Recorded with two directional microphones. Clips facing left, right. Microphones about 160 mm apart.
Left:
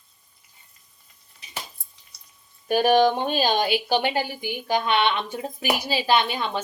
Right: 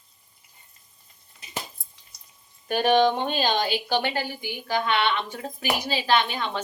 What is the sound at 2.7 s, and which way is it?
A woman's voice, 10° left (ahead or behind).